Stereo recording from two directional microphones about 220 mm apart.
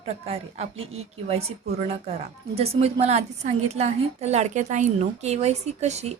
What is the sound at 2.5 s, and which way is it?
Speech, 25° right (ahead or behind).